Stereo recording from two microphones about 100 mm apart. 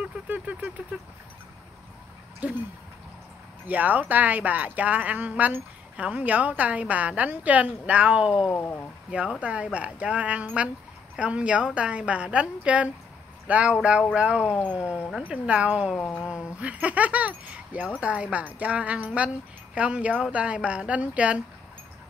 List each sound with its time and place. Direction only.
0.0 s vehicle: 15° right (ahead or behind)
2.4 s speech: 15° right (ahead or behind)
3.6 s speech: 15° right (ahead or behind)
8.5 s speech: 20° left (ahead or behind)
9.1 s speech: 10° right (ahead or behind)